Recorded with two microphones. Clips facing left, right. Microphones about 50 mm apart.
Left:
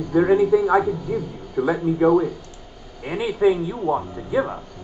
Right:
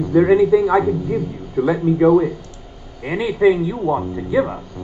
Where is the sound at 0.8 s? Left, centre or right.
Centre.